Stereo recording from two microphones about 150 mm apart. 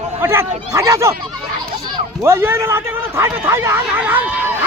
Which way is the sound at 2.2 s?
15° right (ahead or behind).